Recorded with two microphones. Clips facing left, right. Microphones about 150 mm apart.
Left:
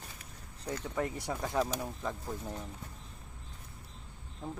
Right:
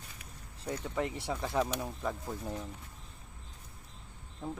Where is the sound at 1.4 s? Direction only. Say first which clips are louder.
Even; 5° left (ahead or behind).